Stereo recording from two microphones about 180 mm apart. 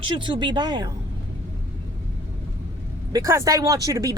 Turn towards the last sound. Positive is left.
turn(degrees=-20)  # may be behind; listen again after turning